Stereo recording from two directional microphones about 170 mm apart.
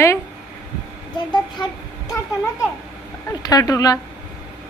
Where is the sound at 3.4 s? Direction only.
20° left (ahead or behind).